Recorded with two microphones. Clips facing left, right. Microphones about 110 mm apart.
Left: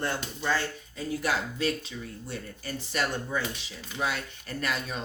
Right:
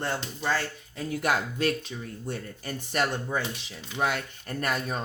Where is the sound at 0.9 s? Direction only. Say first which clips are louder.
Right 2 dB; 55° right (ahead or behind).